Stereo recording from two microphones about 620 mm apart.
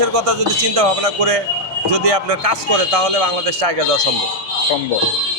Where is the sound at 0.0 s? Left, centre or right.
Right.